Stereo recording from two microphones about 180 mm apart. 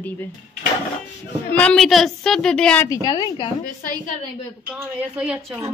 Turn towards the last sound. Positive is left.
turn(degrees=-5)  # may be behind; listen again after turning